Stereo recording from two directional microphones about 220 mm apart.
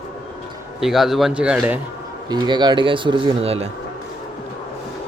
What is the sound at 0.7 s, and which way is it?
A man's voice, centre (ahead or behind).